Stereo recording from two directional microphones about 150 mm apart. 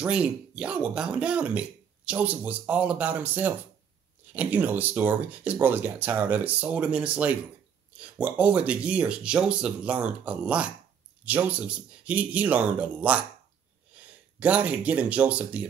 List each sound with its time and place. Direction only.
0.0 s speech: 5° right (ahead or behind)